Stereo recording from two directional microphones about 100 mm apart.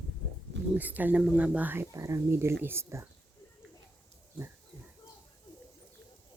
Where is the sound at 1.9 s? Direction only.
30° right (ahead or behind).